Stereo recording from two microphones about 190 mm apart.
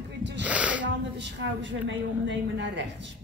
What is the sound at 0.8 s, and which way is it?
A woman's voice, 70° right (ahead or behind).